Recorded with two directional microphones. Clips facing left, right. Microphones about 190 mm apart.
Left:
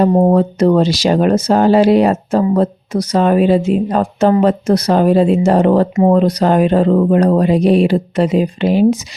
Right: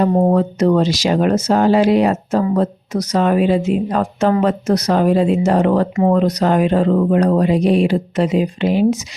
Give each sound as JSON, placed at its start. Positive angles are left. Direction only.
{"t": 0.0, "sound": "speech", "side_deg": 20}
{"t": 0.3, "sound": "speech", "side_deg": 35}